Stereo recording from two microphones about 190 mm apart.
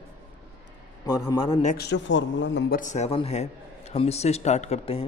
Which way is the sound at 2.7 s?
40° left (ahead or behind).